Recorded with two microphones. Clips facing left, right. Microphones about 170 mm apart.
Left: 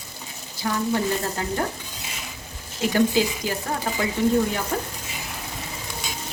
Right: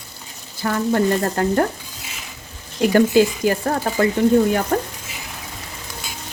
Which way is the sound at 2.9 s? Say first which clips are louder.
Right 6 dB; 55° right (ahead or behind).